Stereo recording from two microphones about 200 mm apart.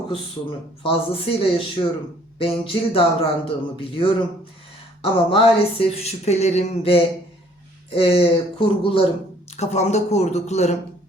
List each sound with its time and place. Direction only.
0.8 s speech: 30° left (ahead or behind)
5.1 s speech: 25° left (ahead or behind)